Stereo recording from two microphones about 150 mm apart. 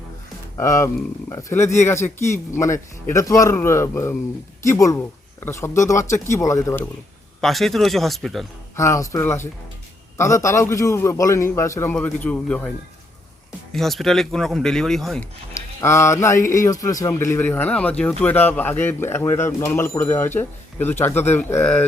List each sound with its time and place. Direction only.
0.5 s a man's voice: 20° left (ahead or behind)
7.4 s speech: centre (ahead or behind)
8.7 s a man's voice: 20° left (ahead or behind)
13.7 s speech: centre (ahead or behind)
15.5 s speech: 20° left (ahead or behind)